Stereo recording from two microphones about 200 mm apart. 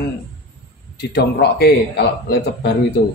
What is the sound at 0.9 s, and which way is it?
Speech, 55° left (ahead or behind).